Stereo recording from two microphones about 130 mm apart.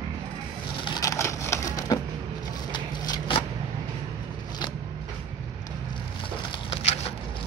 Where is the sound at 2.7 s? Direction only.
30° left (ahead or behind).